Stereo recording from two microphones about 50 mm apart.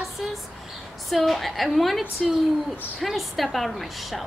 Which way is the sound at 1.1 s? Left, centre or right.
Centre.